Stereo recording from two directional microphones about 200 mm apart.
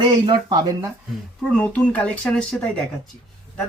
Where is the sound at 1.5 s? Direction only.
5° left (ahead or behind).